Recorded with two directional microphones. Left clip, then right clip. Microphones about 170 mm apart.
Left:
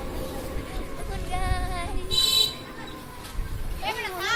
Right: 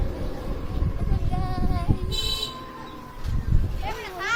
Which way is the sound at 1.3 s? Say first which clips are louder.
Left 2 dB; 5° right (ahead or behind).